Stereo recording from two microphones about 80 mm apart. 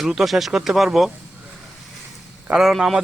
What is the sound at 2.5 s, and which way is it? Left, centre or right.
Speech, centre.